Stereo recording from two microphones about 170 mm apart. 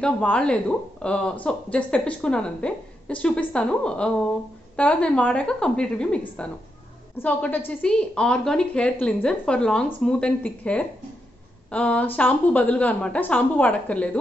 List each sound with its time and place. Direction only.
0.0 s a woman's voice: 5° left (ahead or behind)